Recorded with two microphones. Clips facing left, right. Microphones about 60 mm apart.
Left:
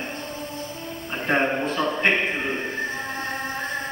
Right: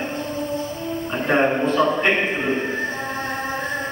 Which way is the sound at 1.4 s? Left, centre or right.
Centre.